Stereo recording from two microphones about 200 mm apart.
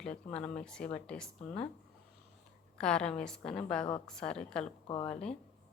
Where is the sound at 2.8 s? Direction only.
5° left (ahead or behind).